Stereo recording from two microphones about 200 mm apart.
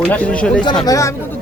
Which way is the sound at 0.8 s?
15° left (ahead or behind).